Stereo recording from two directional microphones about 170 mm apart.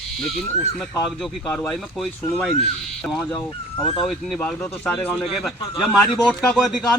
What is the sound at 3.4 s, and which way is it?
Speech, 30° left (ahead or behind).